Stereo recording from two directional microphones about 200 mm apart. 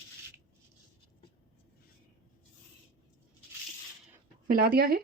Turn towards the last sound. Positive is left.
turn(degrees=-50)  # may be behind; listen again after turning